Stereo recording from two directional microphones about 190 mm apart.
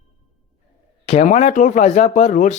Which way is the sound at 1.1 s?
35° left (ahead or behind).